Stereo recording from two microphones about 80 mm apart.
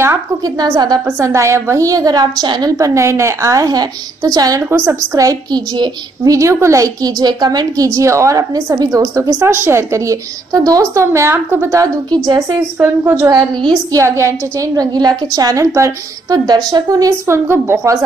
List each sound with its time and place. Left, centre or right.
0.6 s a woman's voice: right
1.0 s a woman's voice: right
2.8 s a woman's voice: right
4.6 s a woman's voice: right
5.1 s a woman's voice: right
9.5 s a woman's voice: right
11.3 s a woman's voice: right
12.7 s a woman's voice: right
13.9 s a woman's voice: right
14.8 s a woman's voice: right
16.4 s a woman's voice: right
17.3 s a woman's voice: right